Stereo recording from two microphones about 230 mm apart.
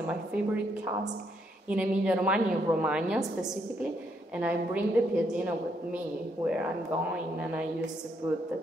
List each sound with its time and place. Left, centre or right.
0.0 s a woman's voice: centre
1.7 s a woman's voice: centre
4.4 s a woman's voice: centre